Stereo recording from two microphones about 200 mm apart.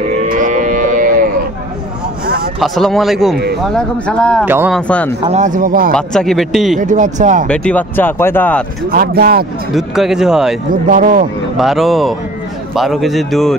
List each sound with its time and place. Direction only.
0.3 s moo: 40° right (ahead or behind)
2.2 s a sound: 45° right (ahead or behind)
2.6 s a man's voice: centre (ahead or behind)
4.5 s speech: 10° right (ahead or behind)
4.7 s a man's voice: 5° left (ahead or behind)
5.2 s speech: 35° right (ahead or behind)
5.9 s a man's voice: centre (ahead or behind)
6.8 s speech: 40° right (ahead or behind)
7.4 s speech: 5° left (ahead or behind)
8.9 s speech: 50° right (ahead or behind)
9.8 s a man's voice: centre (ahead or behind)
10.7 s speech: 45° right (ahead or behind)
11.5 s a man's voice: centre (ahead or behind)